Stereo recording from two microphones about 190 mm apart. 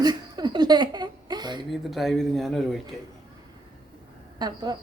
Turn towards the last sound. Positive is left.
turn(degrees=-20)  # may be behind; listen again after turning